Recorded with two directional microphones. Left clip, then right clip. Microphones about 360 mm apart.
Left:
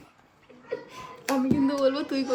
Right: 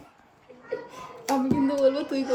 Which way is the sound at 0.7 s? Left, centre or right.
Centre.